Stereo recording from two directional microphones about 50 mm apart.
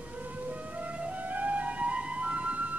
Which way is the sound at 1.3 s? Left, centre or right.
Right.